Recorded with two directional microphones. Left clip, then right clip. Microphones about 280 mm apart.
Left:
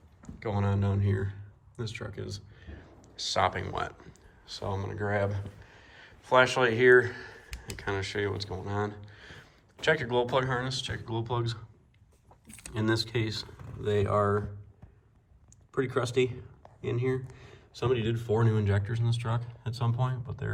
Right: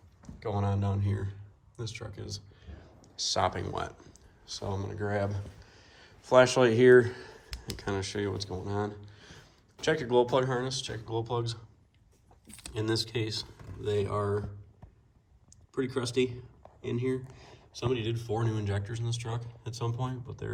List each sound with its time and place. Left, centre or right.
0.2 s a man's voice: centre
12.7 s speech: centre
15.8 s speech: centre